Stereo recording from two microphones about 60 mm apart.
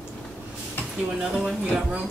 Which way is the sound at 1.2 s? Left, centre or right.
Centre.